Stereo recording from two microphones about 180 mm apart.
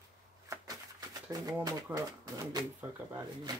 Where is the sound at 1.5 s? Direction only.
20° right (ahead or behind).